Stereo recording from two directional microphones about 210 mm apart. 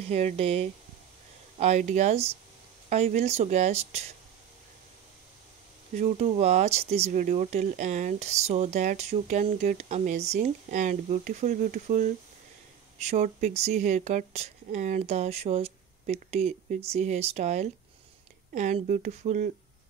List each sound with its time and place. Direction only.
0.1 s speech: 30° right (ahead or behind)
5.9 s speech: 30° right (ahead or behind)